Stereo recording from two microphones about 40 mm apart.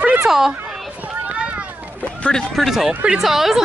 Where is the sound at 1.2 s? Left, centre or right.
Right.